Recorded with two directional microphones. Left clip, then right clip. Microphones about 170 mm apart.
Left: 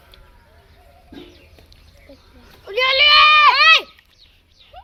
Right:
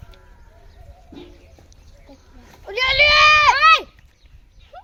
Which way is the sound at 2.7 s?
65° right (ahead or behind).